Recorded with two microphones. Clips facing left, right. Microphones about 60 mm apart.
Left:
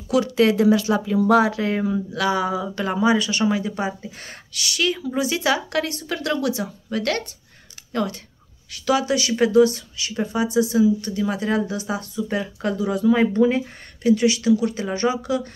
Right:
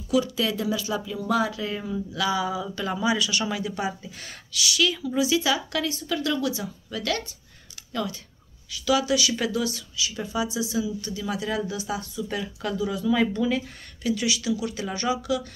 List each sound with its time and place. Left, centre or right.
0.1 s speech: left
2.7 s speech: left
12.3 s speech: left
12.7 s speech: left